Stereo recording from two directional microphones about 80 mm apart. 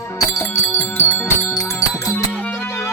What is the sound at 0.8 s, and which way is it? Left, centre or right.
Music, left.